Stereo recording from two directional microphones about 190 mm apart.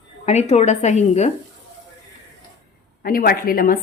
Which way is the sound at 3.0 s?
50° left (ahead or behind).